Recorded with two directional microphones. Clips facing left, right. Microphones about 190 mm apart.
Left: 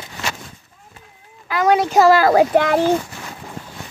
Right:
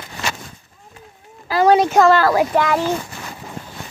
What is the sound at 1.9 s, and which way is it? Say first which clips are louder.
Speech: left 1 dB; 5° left (ahead or behind).